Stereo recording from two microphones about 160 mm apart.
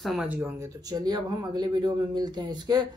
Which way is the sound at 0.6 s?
25° right (ahead or behind).